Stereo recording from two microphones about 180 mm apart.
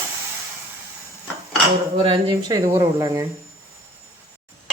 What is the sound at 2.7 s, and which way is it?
Speech, 20° right (ahead or behind).